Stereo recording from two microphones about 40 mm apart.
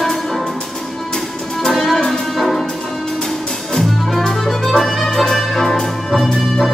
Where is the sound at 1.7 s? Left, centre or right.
Centre.